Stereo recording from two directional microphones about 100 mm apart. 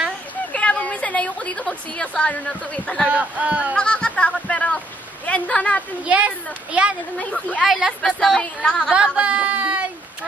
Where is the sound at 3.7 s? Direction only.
10° left (ahead or behind).